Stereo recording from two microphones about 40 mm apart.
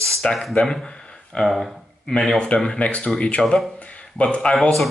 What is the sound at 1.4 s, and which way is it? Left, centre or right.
Speech, centre.